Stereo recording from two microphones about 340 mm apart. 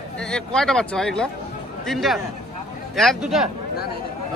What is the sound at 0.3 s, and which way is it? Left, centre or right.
Speech, centre.